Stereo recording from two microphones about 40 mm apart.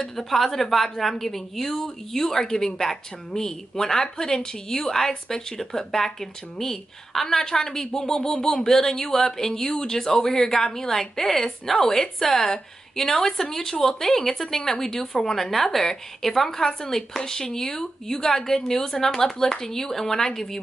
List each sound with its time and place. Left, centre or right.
0.0 s a woman's voice: centre
0.3 s a woman's voice: centre